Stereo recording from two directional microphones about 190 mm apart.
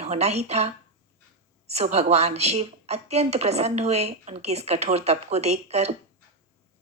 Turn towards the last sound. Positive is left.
turn(degrees=-35)  # may be behind; listen again after turning